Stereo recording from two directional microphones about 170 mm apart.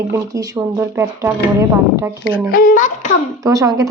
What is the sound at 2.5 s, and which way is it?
Speech, 55° left (ahead or behind).